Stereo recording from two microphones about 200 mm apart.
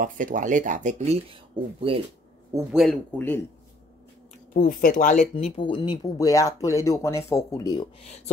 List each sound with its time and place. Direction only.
0.0 s speech: 40° right (ahead or behind)
2.7 s speech: centre (ahead or behind)
4.6 s speech: 45° left (ahead or behind)
5.3 s speech: 25° left (ahead or behind)